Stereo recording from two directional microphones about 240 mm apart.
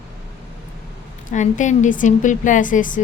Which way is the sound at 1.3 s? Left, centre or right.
Left.